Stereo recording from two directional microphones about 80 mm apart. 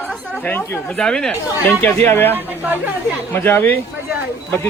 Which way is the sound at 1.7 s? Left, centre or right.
Left.